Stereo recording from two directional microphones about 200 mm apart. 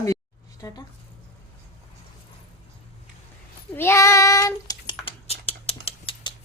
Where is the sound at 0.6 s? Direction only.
20° left (ahead or behind).